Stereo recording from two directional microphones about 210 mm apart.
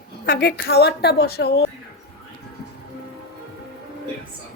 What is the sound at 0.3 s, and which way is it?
Speech, 50° left (ahead or behind).